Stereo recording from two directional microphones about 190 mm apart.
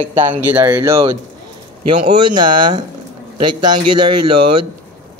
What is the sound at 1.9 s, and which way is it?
Speech, 25° right (ahead or behind).